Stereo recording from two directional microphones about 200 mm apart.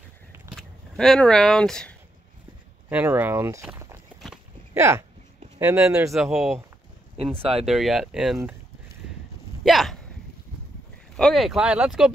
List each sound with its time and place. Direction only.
0.6 s speech: centre (ahead or behind)
2.9 s speech: 10° right (ahead or behind)
7.3 s speech: 30° right (ahead or behind)
7.6 s speech: centre (ahead or behind)
9.6 s speech: centre (ahead or behind)
11.1 s speech: centre (ahead or behind)